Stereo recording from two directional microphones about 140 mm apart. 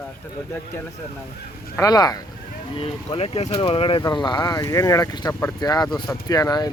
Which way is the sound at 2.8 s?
45° left (ahead or behind).